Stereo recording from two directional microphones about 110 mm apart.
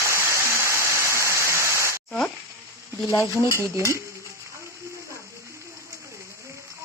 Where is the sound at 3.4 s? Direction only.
25° right (ahead or behind).